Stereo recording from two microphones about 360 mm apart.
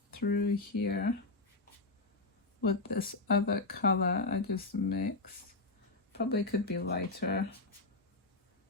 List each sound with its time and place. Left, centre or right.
0.1 s speech: left
2.6 s speech: left
6.1 s speech: left